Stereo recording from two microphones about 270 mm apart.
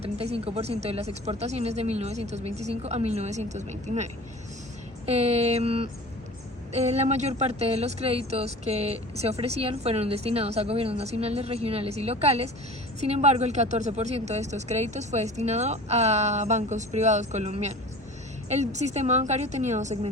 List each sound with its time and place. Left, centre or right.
0.0 s speech: right